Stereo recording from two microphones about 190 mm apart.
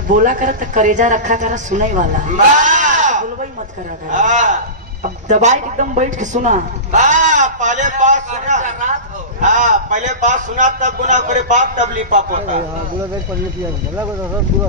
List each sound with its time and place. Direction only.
0.1 s a man's voice: 45° right (ahead or behind)